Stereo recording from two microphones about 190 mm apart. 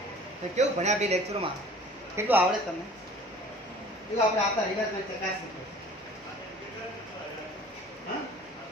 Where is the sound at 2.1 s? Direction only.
10° right (ahead or behind).